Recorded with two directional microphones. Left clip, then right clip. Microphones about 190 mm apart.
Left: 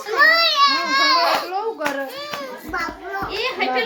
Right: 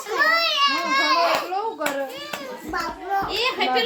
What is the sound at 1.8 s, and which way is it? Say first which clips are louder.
Speech: left 2 dB; 5° left (ahead or behind).